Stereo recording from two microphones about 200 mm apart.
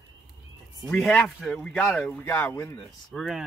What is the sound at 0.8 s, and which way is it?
Speech, 5° left (ahead or behind).